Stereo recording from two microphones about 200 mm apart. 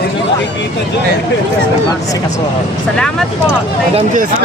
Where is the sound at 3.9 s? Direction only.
40° right (ahead or behind).